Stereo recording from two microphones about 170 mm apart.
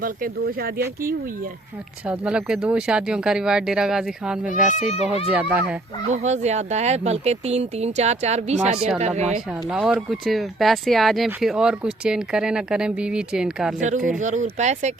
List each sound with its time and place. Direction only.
0.0 s speech: 60° right (ahead or behind)
2.0 s speech: 5° right (ahead or behind)
4.4 s speech: 45° left (ahead or behind)
5.3 s speech: 10° right (ahead or behind)
6.1 s speech: 40° right (ahead or behind)
9.6 s speech: 5° right (ahead or behind)
14.2 s speech: 45° right (ahead or behind)